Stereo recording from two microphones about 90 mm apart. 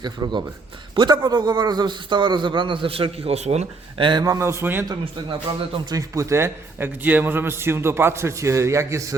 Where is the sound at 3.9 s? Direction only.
70° right (ahead or behind).